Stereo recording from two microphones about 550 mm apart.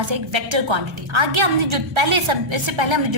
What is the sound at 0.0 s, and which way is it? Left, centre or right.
A woman's voice, right.